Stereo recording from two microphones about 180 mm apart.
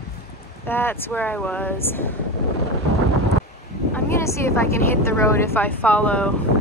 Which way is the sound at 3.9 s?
15° left (ahead or behind).